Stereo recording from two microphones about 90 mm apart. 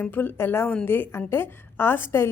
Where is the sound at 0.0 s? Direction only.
20° left (ahead or behind).